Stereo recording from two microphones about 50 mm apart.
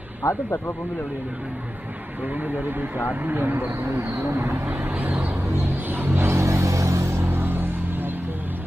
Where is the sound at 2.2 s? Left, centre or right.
Right.